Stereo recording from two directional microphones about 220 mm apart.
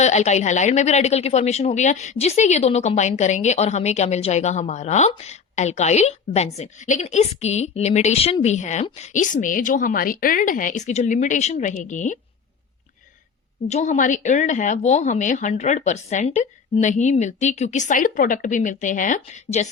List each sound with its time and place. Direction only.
0.0 s speech: 30° left (ahead or behind)
13.7 s speech: 30° left (ahead or behind)